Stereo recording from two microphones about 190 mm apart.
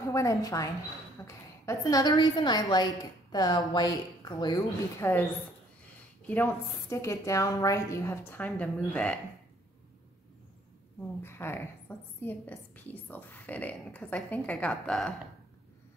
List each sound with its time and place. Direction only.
0.1 s a woman's voice: 15° left (ahead or behind)
6.2 s a woman's voice: 10° left (ahead or behind)
11.2 s a woman's voice: 10° left (ahead or behind)